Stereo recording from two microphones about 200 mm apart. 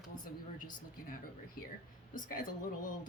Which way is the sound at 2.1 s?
45° left (ahead or behind).